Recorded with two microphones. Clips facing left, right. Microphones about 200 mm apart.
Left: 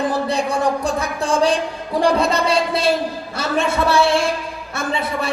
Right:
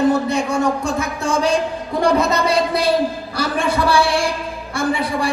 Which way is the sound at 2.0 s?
30° left (ahead or behind).